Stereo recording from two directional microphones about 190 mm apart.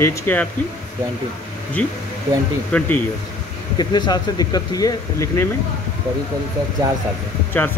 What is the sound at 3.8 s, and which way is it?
Speech, 20° left (ahead or behind).